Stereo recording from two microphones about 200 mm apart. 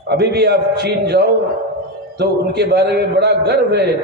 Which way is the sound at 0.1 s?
55° right (ahead or behind).